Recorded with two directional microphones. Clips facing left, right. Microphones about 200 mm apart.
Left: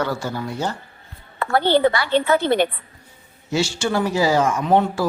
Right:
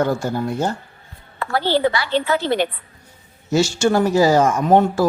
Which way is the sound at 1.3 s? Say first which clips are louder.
Left 2 dB; 55° left (ahead or behind).